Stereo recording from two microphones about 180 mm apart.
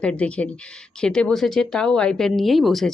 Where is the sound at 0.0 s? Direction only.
5° left (ahead or behind).